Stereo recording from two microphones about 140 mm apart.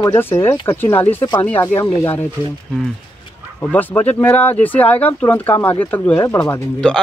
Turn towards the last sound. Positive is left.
turn(degrees=5)  # may be behind; listen again after turning